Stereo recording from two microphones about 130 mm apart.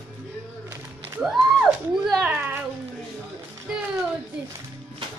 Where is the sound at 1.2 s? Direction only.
Centre (ahead or behind).